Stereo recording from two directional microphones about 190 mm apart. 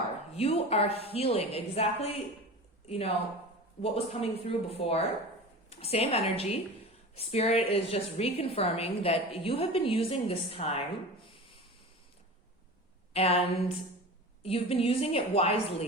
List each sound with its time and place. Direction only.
0.3 s a woman's voice: 30° left (ahead or behind)
13.1 s a woman's voice: 30° left (ahead or behind)
14.4 s a woman's voice: 30° left (ahead or behind)